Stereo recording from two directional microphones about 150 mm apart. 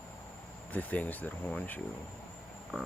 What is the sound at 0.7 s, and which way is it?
Speech, 10° left (ahead or behind).